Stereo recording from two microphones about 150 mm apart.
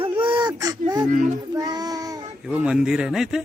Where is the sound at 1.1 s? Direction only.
55° right (ahead or behind).